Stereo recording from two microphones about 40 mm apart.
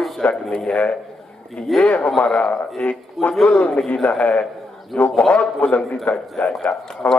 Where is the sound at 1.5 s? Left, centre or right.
Centre.